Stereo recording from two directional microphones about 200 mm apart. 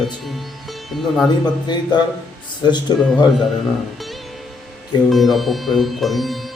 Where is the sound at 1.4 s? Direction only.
20° left (ahead or behind).